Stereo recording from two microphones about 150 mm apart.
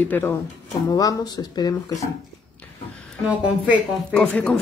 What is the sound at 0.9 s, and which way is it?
Speech, 25° left (ahead or behind).